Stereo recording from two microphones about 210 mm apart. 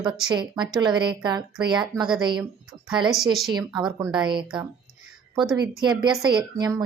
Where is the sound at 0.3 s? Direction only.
20° right (ahead or behind).